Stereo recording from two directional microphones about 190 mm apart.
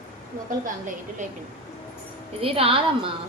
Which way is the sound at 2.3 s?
30° right (ahead or behind).